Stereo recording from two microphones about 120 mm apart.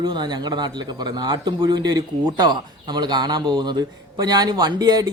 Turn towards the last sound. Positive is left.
turn(degrees=-35)  # may be behind; listen again after turning